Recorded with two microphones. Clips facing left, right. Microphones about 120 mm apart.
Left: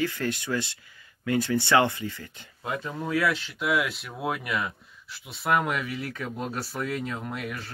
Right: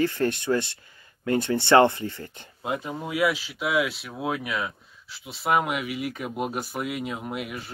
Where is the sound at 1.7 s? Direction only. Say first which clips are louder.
Right 6 dB; 40° right (ahead or behind).